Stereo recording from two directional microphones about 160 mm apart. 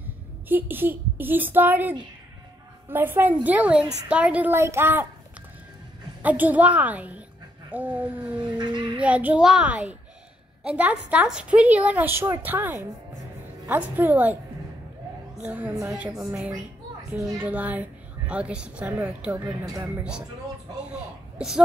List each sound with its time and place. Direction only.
0.5 s a woman's voice: 10° right (ahead or behind)
6.2 s a woman's voice: 10° right (ahead or behind)
8.4 s speech: 30° right (ahead or behind)
9.0 s a woman's voice: 10° right (ahead or behind)
15.4 s a woman's voice: 10° right (ahead or behind)
17.2 s speech: 20° right (ahead or behind)
17.5 s a woman's voice: 10° right (ahead or behind)
19.6 s speech: 20° right (ahead or behind)
20.0 s a woman's voice: 5° right (ahead or behind)
21.4 s speech: 5° right (ahead or behind)